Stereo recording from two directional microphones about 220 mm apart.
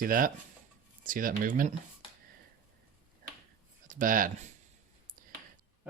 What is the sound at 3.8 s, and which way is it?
Speech, 40° right (ahead or behind).